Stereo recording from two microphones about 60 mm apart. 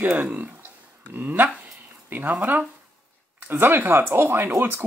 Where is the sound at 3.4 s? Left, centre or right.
Right.